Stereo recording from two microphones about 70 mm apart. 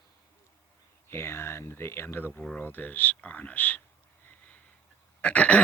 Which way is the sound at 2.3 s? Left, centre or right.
Centre.